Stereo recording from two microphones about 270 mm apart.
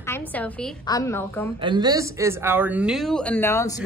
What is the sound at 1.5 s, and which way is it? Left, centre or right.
A woman's voice, centre.